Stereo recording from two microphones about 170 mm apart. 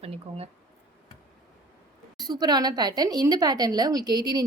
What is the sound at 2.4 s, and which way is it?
A woman's voice, 25° right (ahead or behind).